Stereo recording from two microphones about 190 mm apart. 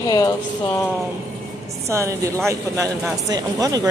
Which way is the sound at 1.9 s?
15° right (ahead or behind).